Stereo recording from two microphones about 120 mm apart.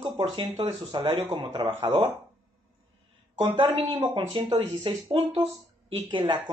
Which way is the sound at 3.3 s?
40° right (ahead or behind).